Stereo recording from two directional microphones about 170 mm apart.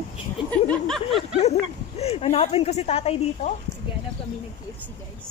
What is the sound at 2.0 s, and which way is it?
A woman's voice, 35° left (ahead or behind).